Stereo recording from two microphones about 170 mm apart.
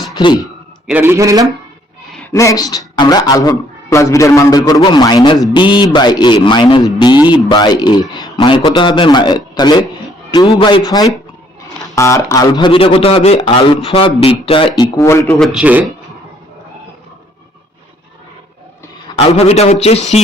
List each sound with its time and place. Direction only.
0.2 s a man's voice: 30° left (ahead or behind)
0.9 s a man's voice: 10° right (ahead or behind)
2.3 s a man's voice: 20° left (ahead or behind)
14.9 s a man's voice: 15° left (ahead or behind)
15.4 s a man's voice: centre (ahead or behind)
19.1 s a man's voice: 40° left (ahead or behind)